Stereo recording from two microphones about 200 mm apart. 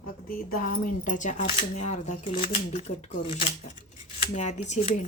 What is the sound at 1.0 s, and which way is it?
Speech, 40° left (ahead or behind).